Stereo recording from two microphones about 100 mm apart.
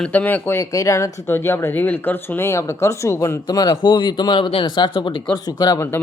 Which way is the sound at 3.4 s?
40° left (ahead or behind).